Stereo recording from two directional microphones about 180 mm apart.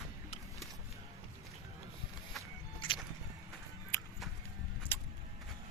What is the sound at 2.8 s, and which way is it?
Music, 30° left (ahead or behind).